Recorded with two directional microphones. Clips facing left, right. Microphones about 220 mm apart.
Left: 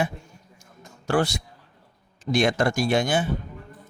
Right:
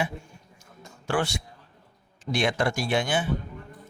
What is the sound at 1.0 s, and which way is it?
Speech, 40° left (ahead or behind).